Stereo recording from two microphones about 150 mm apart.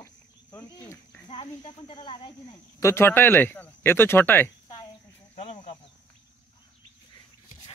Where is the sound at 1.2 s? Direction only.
35° left (ahead or behind).